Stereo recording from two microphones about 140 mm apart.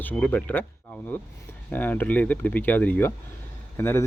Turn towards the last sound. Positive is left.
turn(degrees=20)  # may be behind; listen again after turning